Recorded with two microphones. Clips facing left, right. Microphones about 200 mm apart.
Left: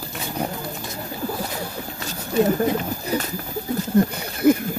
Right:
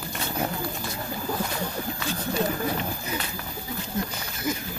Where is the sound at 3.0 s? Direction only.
45° left (ahead or behind).